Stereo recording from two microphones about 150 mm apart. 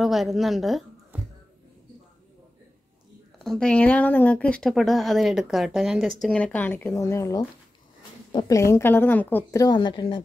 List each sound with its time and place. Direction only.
0.0 s a woman's voice: centre (ahead or behind)
3.3 s speech: 5° left (ahead or behind)
9.6 s speech: 30° left (ahead or behind)